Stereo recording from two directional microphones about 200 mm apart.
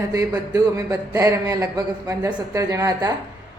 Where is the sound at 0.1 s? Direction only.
15° right (ahead or behind).